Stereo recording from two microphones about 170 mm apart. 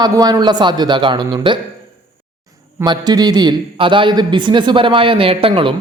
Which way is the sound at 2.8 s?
25° right (ahead or behind).